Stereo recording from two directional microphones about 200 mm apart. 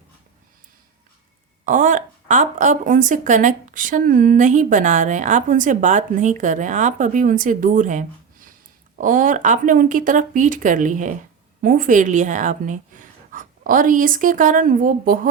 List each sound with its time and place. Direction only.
1.6 s speech: 40° right (ahead or behind)